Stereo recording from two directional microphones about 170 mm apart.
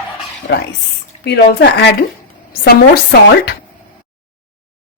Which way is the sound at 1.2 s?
80° left.